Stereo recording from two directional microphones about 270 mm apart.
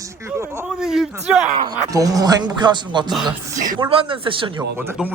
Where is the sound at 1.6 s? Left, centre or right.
Centre.